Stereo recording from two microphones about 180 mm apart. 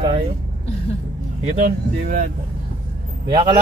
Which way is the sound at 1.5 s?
50° right (ahead or behind).